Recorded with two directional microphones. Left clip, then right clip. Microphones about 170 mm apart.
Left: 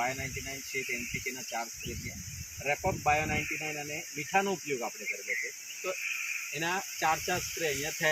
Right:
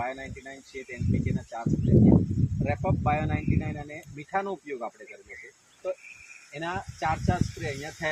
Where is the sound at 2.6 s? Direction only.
15° right (ahead or behind).